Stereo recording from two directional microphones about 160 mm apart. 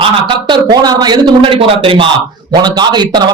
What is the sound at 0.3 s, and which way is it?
Speech, 30° right (ahead or behind).